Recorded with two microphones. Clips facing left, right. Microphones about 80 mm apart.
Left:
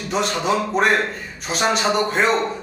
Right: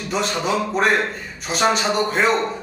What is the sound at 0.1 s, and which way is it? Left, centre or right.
A man's voice, centre.